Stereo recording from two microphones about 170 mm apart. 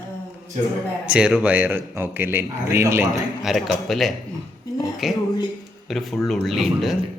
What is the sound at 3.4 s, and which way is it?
Speech, centre (ahead or behind).